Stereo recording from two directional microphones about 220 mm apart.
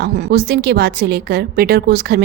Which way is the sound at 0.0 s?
50° right (ahead or behind).